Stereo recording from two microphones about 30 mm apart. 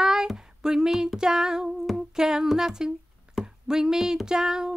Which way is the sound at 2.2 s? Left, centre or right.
Centre.